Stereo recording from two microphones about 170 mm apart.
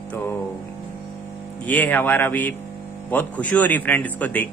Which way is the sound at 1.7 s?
10° left (ahead or behind).